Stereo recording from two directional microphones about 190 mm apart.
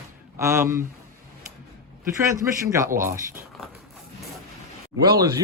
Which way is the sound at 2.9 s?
45° right (ahead or behind).